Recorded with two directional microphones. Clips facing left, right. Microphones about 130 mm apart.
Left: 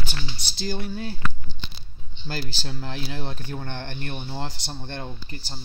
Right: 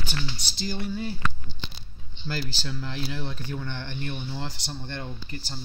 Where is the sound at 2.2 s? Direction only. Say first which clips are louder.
Even; 40° left (ahead or behind).